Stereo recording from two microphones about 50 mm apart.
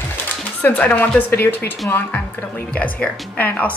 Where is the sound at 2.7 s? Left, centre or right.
Left.